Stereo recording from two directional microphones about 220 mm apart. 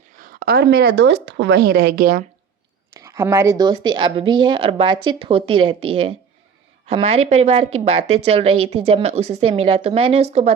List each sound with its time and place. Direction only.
0.2 s a woman's voice: 40° right (ahead or behind)
2.9 s speech: 15° right (ahead or behind); by 10.5 s 30° right (ahead or behind)